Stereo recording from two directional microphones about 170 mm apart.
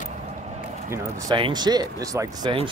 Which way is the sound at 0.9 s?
20° right (ahead or behind).